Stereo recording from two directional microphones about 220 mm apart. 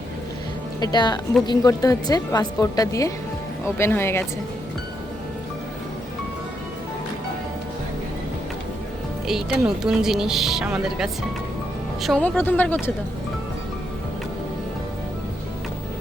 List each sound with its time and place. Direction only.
0.8 s a woman's voice: 20° left (ahead or behind)
9.2 s a woman's voice: centre (ahead or behind)